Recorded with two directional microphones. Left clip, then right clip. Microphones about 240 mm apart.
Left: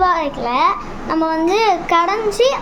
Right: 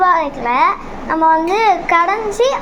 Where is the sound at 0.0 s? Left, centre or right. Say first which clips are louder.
Right 3 dB; centre.